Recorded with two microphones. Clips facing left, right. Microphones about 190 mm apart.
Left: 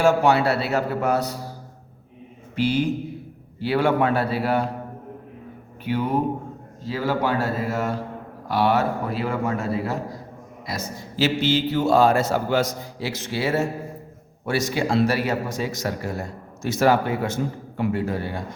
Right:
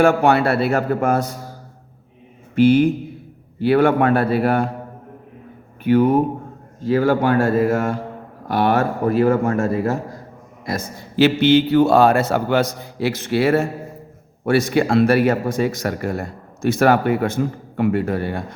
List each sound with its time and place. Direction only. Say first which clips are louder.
0.0 s a man's voice: right 3 dB; 55° right (ahead or behind)
2.6 s a man's voice: right 8 dB; 55° right (ahead or behind)
5.8 s a man's voice: right 8 dB; 50° right (ahead or behind)